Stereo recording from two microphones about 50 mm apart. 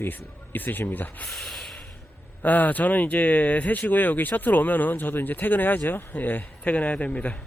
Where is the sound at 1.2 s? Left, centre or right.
Centre.